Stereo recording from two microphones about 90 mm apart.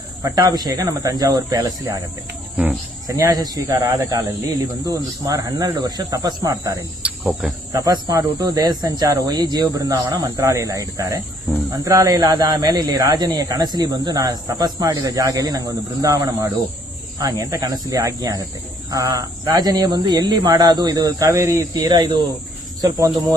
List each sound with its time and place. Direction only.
0.2 s speech: 40° right (ahead or behind)
3.1 s speech: 35° right (ahead or behind)
7.0 s cricket: 5° right (ahead or behind)
7.7 s speech: 40° right (ahead or behind)